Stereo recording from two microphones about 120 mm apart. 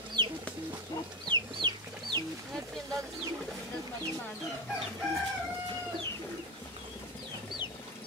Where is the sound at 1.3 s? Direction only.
40° right (ahead or behind).